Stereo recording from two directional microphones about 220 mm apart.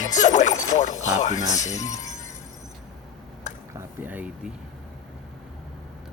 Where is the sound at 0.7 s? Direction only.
35° left (ahead or behind).